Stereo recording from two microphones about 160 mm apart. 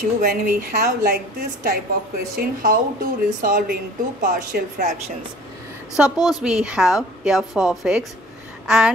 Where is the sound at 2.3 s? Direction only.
60° right (ahead or behind).